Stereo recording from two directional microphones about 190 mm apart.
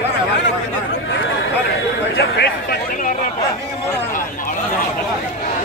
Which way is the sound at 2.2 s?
55° left (ahead or behind).